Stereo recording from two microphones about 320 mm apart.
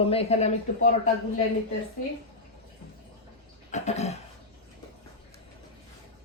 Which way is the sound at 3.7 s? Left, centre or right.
Left.